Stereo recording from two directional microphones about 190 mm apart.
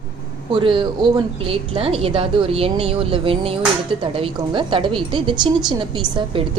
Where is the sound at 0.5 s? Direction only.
25° right (ahead or behind).